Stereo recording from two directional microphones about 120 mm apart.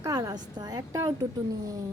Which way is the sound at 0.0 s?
30° right (ahead or behind).